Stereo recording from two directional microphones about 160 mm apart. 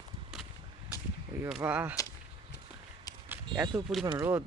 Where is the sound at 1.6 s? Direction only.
10° right (ahead or behind).